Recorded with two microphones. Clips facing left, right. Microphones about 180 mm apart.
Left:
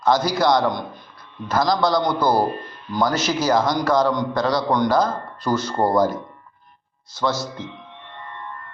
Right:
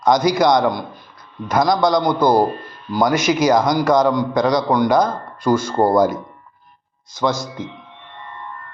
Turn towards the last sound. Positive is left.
turn(degrees=-15)  # may be behind; listen again after turning